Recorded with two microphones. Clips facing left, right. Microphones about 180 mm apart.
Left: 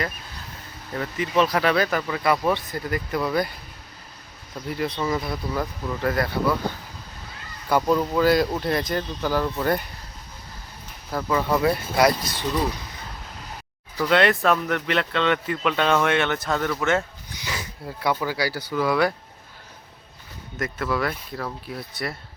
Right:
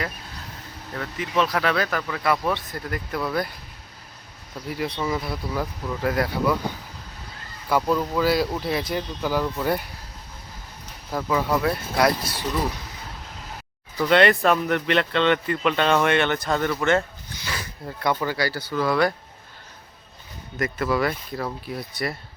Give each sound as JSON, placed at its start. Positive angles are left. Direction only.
{"t": 0.9, "sound": "speech", "side_deg": 0}
{"t": 4.7, "sound": "speech", "side_deg": -5}
{"t": 7.9, "sound": "speech", "side_deg": 0}
{"t": 11.1, "sound": "speech", "side_deg": -5}
{"t": 14.0, "sound": "speech", "side_deg": 0}
{"t": 17.2, "sound": "a sound", "side_deg": 15}
{"t": 17.8, "sound": "speech", "side_deg": 5}
{"t": 20.6, "sound": "speech", "side_deg": 0}